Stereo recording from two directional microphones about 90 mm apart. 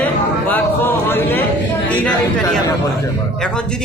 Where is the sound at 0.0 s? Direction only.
20° left (ahead or behind).